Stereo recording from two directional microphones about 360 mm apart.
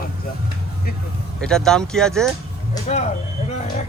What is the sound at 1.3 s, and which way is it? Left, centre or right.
Speech, centre.